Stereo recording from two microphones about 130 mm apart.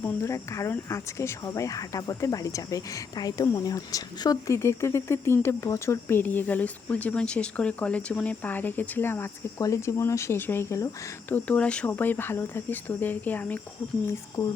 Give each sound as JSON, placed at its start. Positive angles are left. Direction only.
{"t": 0.0, "sound": "speech", "side_deg": 20}